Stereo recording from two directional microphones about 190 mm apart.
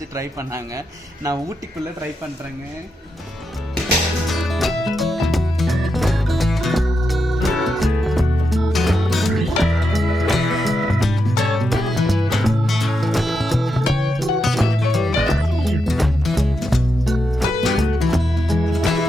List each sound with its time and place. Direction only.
4.3 s music: centre (ahead or behind)